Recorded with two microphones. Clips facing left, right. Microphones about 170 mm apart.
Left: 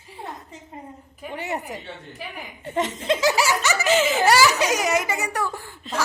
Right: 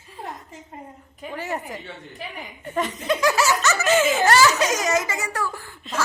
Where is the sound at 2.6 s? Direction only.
25° left (ahead or behind).